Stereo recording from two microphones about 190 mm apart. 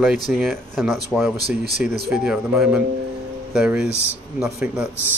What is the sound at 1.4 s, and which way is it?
Speech, 55° right (ahead or behind).